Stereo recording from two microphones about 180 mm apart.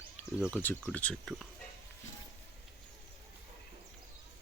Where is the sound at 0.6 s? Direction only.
10° left (ahead or behind).